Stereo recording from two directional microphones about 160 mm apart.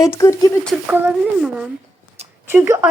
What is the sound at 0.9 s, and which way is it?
Speech, 10° right (ahead or behind).